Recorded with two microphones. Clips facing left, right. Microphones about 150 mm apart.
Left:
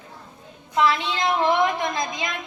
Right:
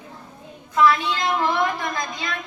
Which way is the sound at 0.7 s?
25° left (ahead or behind).